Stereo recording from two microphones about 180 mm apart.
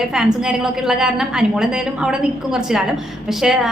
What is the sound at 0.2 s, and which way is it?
A woman's voice, 5° right (ahead or behind).